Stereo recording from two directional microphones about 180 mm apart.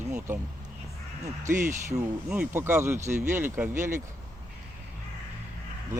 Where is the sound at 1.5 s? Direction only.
15° right (ahead or behind).